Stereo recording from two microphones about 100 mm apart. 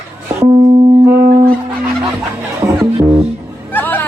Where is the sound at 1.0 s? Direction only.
25° right (ahead or behind).